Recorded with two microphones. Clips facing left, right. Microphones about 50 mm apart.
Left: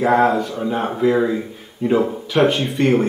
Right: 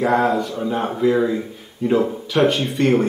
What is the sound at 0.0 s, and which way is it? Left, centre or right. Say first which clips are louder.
Speech: left 2 dB; centre.